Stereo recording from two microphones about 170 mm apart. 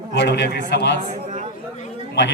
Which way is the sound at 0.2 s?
85° left.